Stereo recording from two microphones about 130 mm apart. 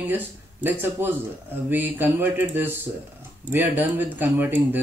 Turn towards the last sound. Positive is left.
turn(degrees=-15)  # may be behind; listen again after turning